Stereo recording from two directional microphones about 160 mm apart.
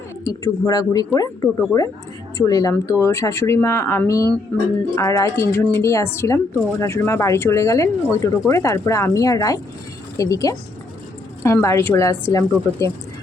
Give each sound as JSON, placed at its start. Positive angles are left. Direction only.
{"t": 0.3, "sound": "a woman's voice", "side_deg": 20}
{"t": 4.9, "sound": "a woman's voice", "side_deg": 20}